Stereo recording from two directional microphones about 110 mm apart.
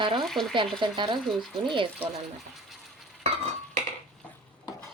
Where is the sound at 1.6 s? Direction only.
50° right (ahead or behind).